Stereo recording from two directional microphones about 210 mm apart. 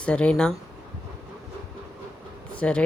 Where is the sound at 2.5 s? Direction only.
5° left (ahead or behind).